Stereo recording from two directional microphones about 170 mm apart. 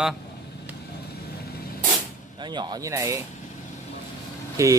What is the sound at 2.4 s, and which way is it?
Speech, 25° right (ahead or behind).